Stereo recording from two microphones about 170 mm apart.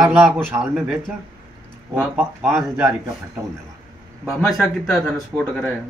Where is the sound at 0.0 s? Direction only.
5° right (ahead or behind).